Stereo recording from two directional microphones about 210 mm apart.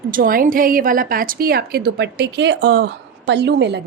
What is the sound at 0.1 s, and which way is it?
A woman's voice, 40° right (ahead or behind).